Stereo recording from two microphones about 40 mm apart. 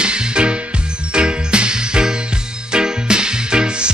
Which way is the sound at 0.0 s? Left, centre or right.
Right.